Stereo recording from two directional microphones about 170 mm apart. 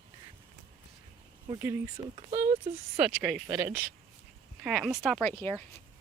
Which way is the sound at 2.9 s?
5° right (ahead or behind).